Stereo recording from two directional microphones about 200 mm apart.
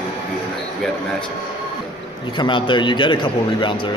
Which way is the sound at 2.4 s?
25° left (ahead or behind).